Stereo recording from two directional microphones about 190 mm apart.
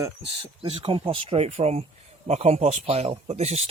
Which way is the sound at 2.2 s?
35° right (ahead or behind).